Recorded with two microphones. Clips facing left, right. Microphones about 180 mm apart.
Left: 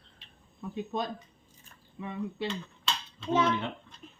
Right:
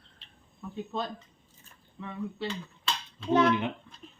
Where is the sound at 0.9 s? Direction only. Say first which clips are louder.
Even; 15° left (ahead or behind).